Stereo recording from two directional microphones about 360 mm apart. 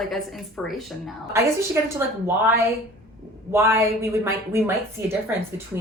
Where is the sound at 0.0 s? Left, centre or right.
Centre.